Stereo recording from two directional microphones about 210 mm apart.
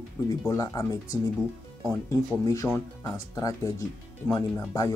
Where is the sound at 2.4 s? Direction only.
15° left (ahead or behind).